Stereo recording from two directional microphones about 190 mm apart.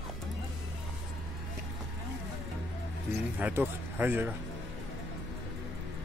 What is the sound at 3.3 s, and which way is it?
Speech, 10° right (ahead or behind).